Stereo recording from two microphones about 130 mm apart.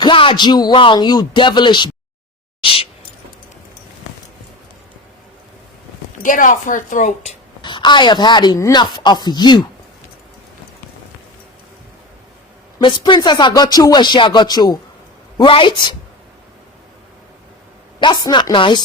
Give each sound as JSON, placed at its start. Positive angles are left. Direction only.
{"t": 0.0, "sound": "speech", "side_deg": 40}
{"t": 2.6, "sound": "a sound", "side_deg": 45}
{"t": 6.1, "sound": "a woman's voice", "side_deg": 90}
{"t": 7.6, "sound": "a woman's voice", "side_deg": 35}
{"t": 8.5, "sound": "speech", "side_deg": 25}
{"t": 8.8, "sound": "speech", "side_deg": 35}
{"t": 12.8, "sound": "speech", "side_deg": 35}
{"t": 18.0, "sound": "speech", "side_deg": 35}